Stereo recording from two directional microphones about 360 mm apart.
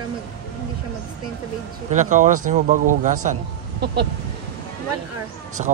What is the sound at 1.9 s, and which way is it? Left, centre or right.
Speech, right.